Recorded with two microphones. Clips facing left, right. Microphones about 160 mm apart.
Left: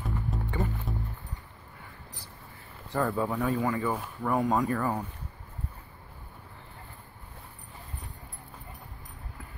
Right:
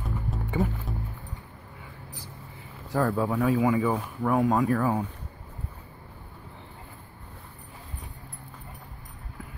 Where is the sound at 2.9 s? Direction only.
Centre (ahead or behind).